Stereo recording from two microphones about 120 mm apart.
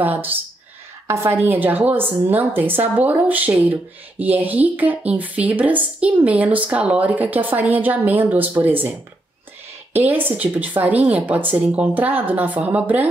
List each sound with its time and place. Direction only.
0.0 s a woman's voice: 15° right (ahead or behind)
9.9 s a woman's voice: 15° right (ahead or behind)